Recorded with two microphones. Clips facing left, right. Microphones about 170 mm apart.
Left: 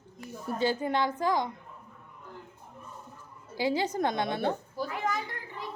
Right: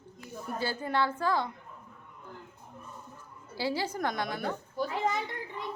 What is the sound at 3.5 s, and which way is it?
A woman's voice, 20° left (ahead or behind).